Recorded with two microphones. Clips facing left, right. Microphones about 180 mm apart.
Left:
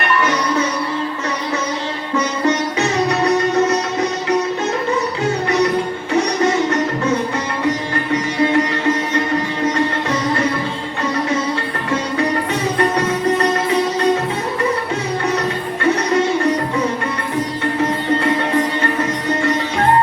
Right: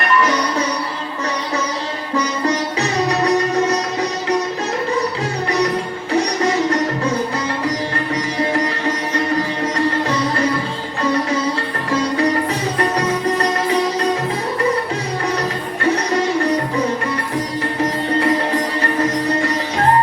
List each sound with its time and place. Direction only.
0.0 s music: 35° right (ahead or behind)
2.1 s music: 35° right (ahead or behind)
9.6 s music: 35° right (ahead or behind)
13.0 s music: 35° right (ahead or behind)
15.8 s music: 35° right (ahead or behind)
18.2 s music: 35° right (ahead or behind)